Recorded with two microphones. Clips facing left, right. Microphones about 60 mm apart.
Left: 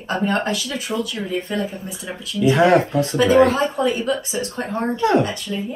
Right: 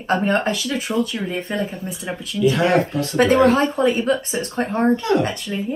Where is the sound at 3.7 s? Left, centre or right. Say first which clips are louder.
Right 2 dB; right.